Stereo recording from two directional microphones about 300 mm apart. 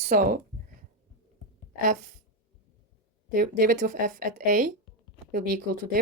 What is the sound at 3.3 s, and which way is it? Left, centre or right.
Speech, right.